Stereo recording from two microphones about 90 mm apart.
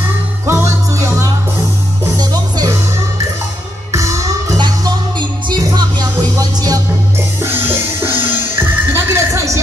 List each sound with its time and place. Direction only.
0.5 s music: 30° right (ahead or behind)
3.9 s music: 35° right (ahead or behind)
5.5 s music: 55° right (ahead or behind)
7.4 s music: 25° right (ahead or behind)